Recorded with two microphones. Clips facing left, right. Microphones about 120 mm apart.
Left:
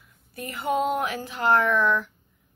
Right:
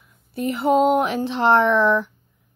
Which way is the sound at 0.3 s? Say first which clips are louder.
Right 8 dB; 30° right (ahead or behind).